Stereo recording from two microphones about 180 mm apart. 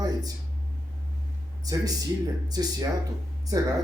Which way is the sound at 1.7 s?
20° right (ahead or behind).